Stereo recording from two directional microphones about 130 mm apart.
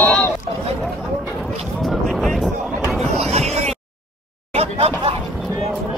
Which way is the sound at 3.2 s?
55° right (ahead or behind).